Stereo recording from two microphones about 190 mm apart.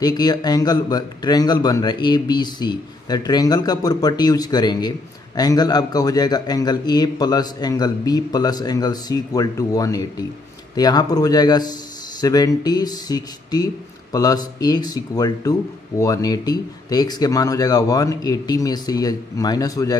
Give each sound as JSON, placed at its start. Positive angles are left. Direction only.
{"t": 0.0, "sound": "a man's voice", "side_deg": 20}